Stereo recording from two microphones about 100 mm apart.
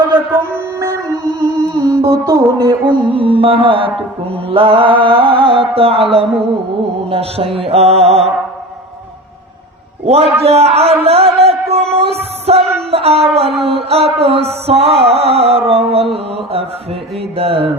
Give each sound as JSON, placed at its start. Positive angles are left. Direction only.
{"t": 0.8, "sound": "music", "side_deg": -30}
{"t": 2.8, "sound": "music", "side_deg": -60}
{"t": 10.1, "sound": "speech", "side_deg": -90}
{"t": 11.0, "sound": "music", "side_deg": -80}
{"t": 12.9, "sound": "a sound", "side_deg": -80}
{"t": 13.6, "sound": "music", "side_deg": -80}